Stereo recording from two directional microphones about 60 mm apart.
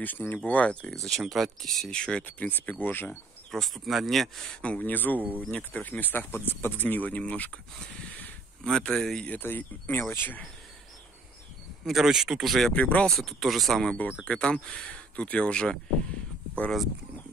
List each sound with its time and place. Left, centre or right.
0.0 s speech: left
0.5 s speech: left
1.2 s speech: centre
1.9 s speech: centre
2.2 s speech: left
3.5 s speech: centre
4.6 s speech: left
8.6 s speech: centre
9.2 s speech: left
11.8 s speech: centre
12.7 s speech: left
13.0 s speech: centre
14.2 s speech: centre